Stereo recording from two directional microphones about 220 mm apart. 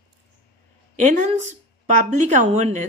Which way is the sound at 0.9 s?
35° right (ahead or behind).